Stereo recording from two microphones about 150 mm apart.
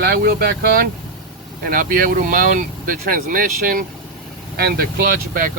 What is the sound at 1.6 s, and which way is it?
Speech, 70° right (ahead or behind).